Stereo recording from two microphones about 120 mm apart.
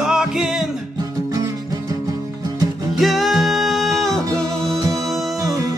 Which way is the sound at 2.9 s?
Centre (ahead or behind).